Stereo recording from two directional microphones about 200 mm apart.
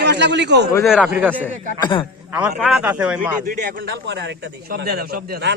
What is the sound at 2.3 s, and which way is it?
A man's voice, 5° right (ahead or behind).